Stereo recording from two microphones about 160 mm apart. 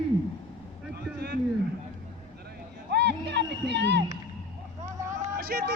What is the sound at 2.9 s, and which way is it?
Music, 90° right.